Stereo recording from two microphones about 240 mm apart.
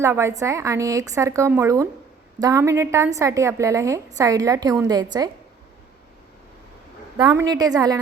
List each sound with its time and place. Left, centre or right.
0.0 s a woman's voice: centre
7.2 s a woman's voice: centre